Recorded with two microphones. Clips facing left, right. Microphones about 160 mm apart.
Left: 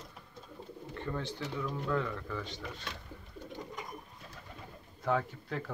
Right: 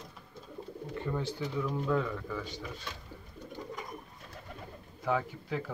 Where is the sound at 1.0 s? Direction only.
10° right (ahead or behind).